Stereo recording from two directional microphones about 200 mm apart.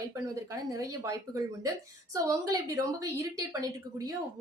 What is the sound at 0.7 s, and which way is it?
A woman's voice, 15° right (ahead or behind).